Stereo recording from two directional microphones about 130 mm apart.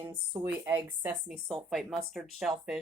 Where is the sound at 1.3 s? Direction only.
Centre (ahead or behind).